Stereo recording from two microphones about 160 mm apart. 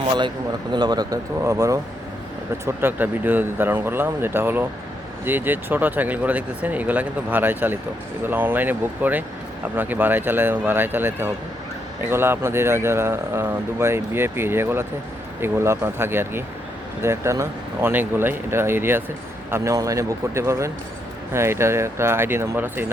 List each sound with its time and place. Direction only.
0.7 s a man's voice: 25° right (ahead or behind)